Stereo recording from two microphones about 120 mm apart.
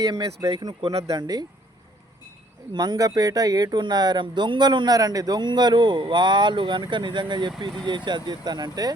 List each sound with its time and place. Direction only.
0.0 s speech: 30° right (ahead or behind)
2.7 s speech: 35° right (ahead or behind)